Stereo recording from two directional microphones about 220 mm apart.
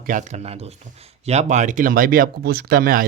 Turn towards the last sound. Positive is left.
turn(degrees=-40)  # may be behind; listen again after turning